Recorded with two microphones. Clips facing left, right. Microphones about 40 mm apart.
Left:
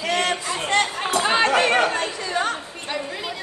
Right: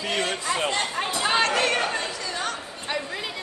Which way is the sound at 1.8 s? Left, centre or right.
Left.